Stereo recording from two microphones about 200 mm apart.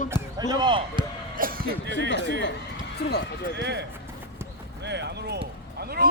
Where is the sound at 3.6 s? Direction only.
55° right (ahead or behind).